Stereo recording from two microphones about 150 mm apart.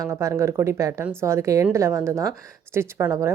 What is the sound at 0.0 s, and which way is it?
A woman's voice, 20° right (ahead or behind).